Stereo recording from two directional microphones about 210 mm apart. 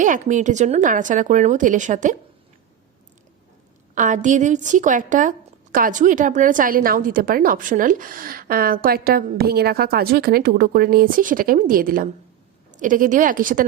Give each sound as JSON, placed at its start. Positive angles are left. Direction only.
{"t": 0.0, "sound": "a woman's voice", "side_deg": -35}
{"t": 3.9, "sound": "a woman's voice", "side_deg": -35}